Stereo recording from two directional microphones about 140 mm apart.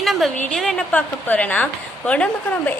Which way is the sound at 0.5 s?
5° left (ahead or behind).